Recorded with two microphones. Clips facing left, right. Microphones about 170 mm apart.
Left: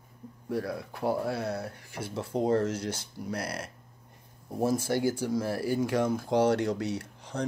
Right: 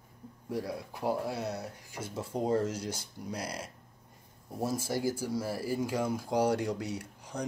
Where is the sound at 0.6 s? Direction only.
15° right (ahead or behind).